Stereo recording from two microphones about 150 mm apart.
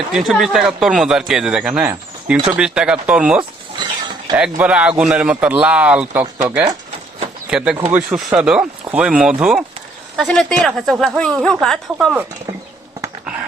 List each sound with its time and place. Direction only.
0.1 s speech: centre (ahead or behind)
3.8 s a sound: 30° right (ahead or behind)
4.5 s speech: 10° right (ahead or behind)